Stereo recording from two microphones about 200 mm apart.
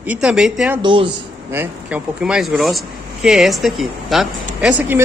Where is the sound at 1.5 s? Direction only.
10° right (ahead or behind).